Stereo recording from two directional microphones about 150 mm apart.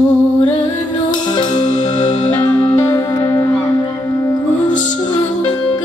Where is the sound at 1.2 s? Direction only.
30° left (ahead or behind).